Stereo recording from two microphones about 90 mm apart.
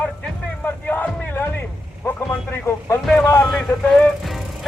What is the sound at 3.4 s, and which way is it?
Speech, centre (ahead or behind).